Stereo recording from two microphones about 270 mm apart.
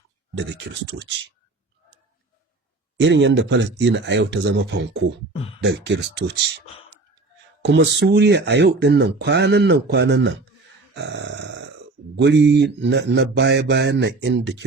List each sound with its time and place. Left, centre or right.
0.3 s speech: right
3.0 s speech: right
7.6 s speech: right